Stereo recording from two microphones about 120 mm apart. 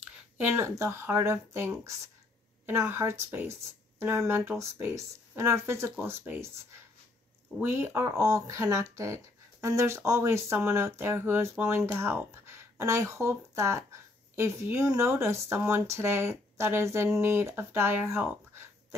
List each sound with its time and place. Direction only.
0.0 s speech: 15° right (ahead or behind)
7.6 s speech: 20° right (ahead or behind)